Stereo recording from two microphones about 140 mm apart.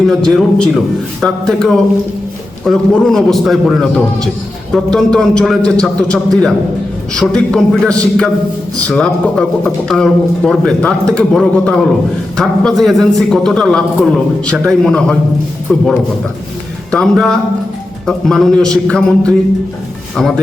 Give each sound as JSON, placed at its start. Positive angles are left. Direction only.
{"t": 0.1, "sound": "a man's voice", "side_deg": 0}
{"t": 16.9, "sound": "a man's voice", "side_deg": 5}